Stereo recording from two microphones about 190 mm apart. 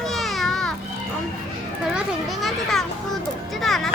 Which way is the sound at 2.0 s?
Centre (ahead or behind).